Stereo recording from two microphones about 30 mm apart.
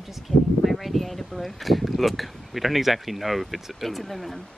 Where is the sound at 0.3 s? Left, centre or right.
Left.